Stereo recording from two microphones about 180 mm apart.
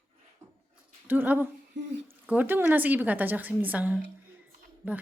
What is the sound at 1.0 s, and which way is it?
A woman's voice, 10° right (ahead or behind).